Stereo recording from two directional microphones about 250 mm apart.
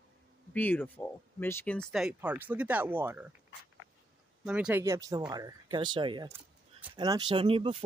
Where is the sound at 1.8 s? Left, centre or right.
Centre.